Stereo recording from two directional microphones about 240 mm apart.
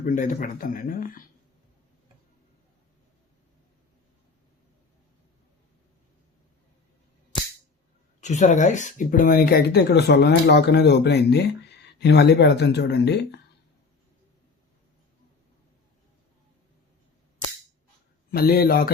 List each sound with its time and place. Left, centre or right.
0.0 s speech: left
8.2 s speech: left
18.3 s speech: left